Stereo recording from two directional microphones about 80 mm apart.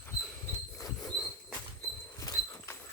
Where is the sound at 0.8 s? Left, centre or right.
Left.